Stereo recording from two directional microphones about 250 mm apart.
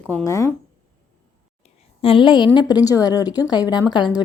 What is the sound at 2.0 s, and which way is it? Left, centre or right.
A woman's voice, left.